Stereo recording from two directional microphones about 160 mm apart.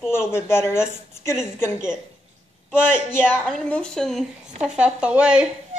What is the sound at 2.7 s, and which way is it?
A woman's voice, 15° left (ahead or behind).